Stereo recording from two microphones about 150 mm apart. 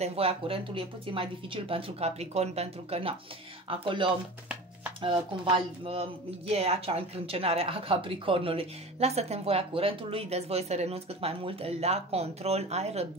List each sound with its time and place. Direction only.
0.0 s speech: 40° right (ahead or behind)